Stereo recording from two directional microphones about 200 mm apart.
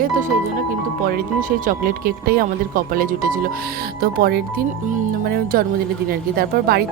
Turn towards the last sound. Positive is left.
turn(degrees=-50)  # may be behind; listen again after turning